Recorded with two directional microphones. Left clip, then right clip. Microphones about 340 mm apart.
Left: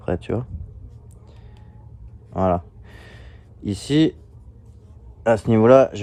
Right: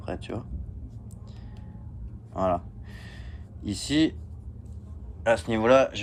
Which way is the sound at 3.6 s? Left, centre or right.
Left.